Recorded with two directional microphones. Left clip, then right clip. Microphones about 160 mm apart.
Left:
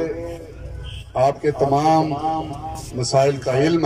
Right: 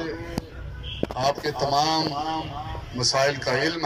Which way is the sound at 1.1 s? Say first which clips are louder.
Left 8 dB; 55° left (ahead or behind).